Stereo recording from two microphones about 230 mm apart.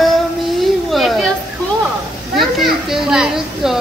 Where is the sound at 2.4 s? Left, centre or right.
Centre.